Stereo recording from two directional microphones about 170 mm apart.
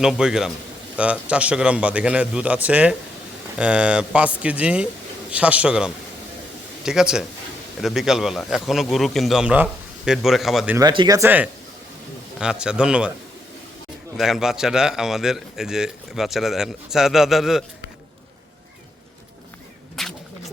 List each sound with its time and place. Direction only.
0.0 s a man's voice: 5° right (ahead or behind)
10.8 s speech: 25° right (ahead or behind)
12.4 s a man's voice: 5° right (ahead or behind)
14.2 s a man's voice: centre (ahead or behind)
20.0 s a sound: centre (ahead or behind)